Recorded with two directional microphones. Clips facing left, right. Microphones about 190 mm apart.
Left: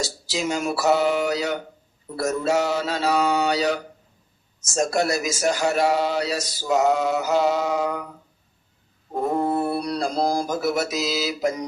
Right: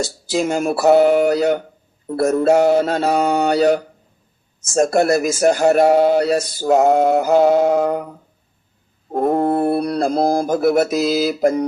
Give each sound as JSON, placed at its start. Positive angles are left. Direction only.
{"t": 0.0, "sound": "speech", "side_deg": -55}
{"t": 9.1, "sound": "mantra", "side_deg": -60}